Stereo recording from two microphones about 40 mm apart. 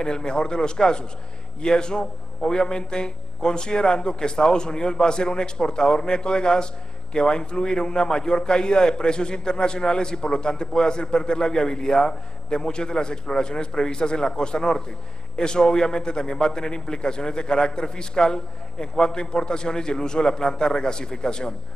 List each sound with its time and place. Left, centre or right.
0.0 s a man's voice: centre